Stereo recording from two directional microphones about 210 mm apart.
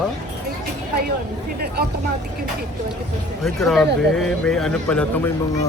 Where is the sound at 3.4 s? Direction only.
Centre (ahead or behind).